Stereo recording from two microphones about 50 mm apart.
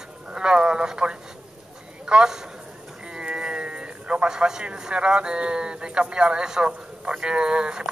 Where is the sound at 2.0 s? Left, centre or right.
Centre.